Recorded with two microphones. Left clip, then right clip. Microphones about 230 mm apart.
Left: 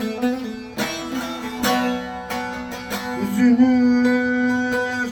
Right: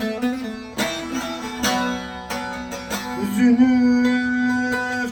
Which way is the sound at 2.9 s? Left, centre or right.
Centre.